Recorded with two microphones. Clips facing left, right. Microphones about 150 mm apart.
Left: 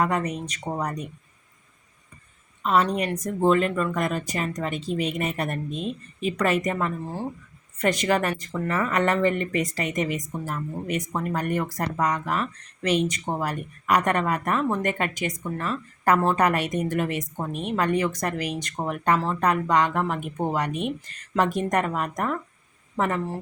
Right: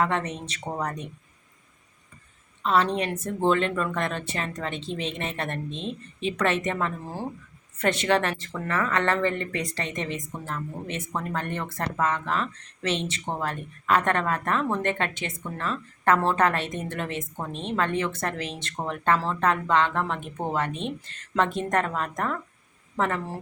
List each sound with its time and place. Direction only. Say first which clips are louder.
0.0 s speech: left 2 dB; 10° left (ahead or behind)
2.6 s speech: left 1 dB; 5° left (ahead or behind)
9.8 s speech: left 5 dB; 15° left (ahead or behind)